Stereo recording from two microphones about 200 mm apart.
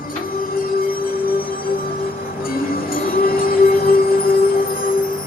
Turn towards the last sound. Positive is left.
turn(degrees=45)  # may be behind; listen again after turning